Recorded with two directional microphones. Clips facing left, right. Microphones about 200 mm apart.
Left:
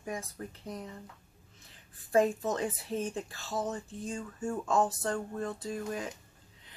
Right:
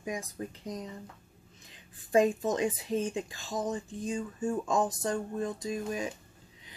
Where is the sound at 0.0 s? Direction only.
15° right (ahead or behind).